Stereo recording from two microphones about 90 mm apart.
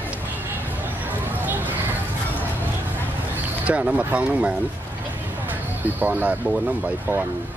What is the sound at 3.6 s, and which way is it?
Speech, 15° right (ahead or behind).